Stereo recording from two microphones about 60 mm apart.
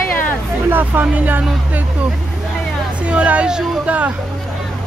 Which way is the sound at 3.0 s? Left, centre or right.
Right.